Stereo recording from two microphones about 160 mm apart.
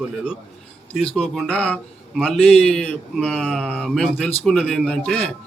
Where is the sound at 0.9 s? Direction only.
5° left (ahead or behind).